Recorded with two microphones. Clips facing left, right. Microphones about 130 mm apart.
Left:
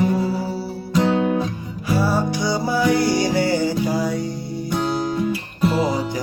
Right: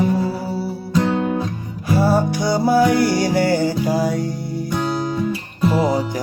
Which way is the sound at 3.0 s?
15° left (ahead or behind).